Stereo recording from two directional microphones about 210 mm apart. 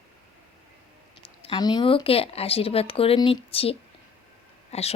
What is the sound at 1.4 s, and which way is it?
A woman's voice, 25° left (ahead or behind).